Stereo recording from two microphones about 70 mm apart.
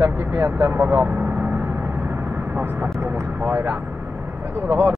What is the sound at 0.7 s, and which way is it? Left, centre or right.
Speech, right.